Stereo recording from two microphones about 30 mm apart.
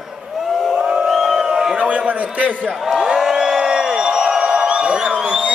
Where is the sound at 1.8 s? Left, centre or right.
Right.